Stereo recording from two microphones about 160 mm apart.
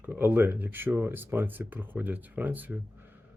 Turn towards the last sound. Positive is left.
turn(degrees=-10)  # may be behind; listen again after turning